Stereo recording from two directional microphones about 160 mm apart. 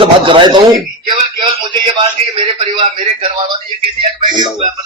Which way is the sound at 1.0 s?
30° right (ahead or behind).